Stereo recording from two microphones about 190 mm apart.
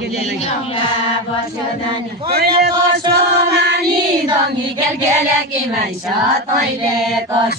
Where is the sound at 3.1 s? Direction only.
60° right (ahead or behind).